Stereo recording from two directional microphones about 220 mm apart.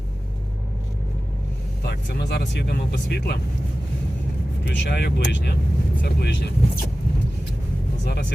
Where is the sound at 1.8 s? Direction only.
45° left (ahead or behind).